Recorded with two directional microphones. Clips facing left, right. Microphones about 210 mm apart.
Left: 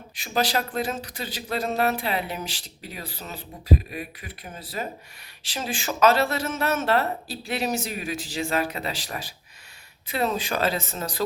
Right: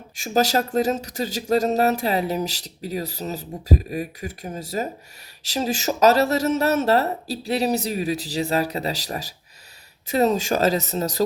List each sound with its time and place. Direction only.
0.2 s speech: 45° right (ahead or behind)
10.1 s speech: 40° right (ahead or behind)